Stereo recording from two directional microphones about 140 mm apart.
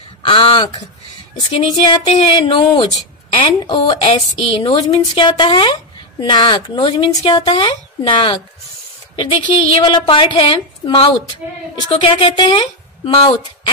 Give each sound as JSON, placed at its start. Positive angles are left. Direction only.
{"t": 0.2, "sound": "a woman's voice", "side_deg": 40}
{"t": 5.3, "sound": "a woman's voice", "side_deg": 35}